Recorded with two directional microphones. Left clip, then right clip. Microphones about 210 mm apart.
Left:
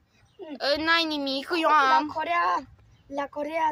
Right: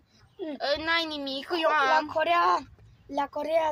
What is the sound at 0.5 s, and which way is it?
A woman's voice, 30° left (ahead or behind).